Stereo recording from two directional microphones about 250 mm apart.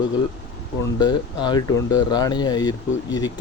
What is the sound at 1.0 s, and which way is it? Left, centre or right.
Speech, centre.